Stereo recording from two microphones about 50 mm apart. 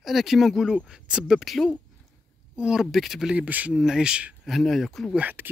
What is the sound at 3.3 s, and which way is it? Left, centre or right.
Speech, right.